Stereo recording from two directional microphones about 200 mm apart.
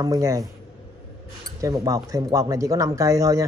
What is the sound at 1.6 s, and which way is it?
Speech, 15° right (ahead or behind).